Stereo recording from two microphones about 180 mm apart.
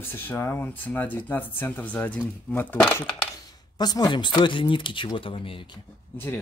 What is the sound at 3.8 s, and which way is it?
Speech, 20° left (ahead or behind).